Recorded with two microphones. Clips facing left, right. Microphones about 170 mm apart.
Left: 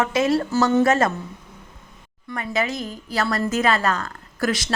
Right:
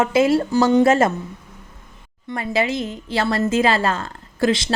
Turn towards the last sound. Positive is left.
turn(degrees=-25)  # may be behind; listen again after turning